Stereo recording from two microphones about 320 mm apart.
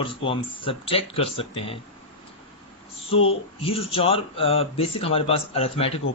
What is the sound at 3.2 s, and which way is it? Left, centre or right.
Speech, centre.